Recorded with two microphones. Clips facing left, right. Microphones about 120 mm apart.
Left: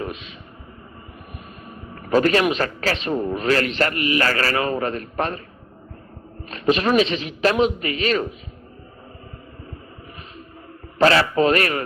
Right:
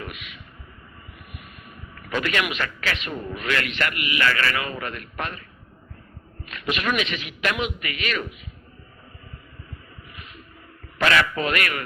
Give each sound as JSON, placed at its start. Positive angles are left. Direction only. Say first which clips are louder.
{"t": 0.0, "sound": "speech", "louder": "left 7 dB", "side_deg": 30}
{"t": 2.0, "sound": "a man's voice", "louder": "left 8 dB", "side_deg": 35}
{"t": 6.5, "sound": "a man's voice", "louder": "left 8 dB", "side_deg": 35}
{"t": 10.9, "sound": "a man's voice", "louder": "left 5 dB", "side_deg": 30}